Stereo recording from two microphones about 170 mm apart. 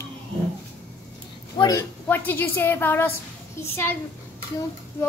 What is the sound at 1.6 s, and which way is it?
A woman's voice, 15° left (ahead or behind).